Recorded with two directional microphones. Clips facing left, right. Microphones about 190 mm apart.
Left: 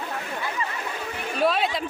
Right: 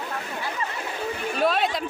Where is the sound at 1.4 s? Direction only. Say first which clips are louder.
Left 1 dB; centre (ahead or behind).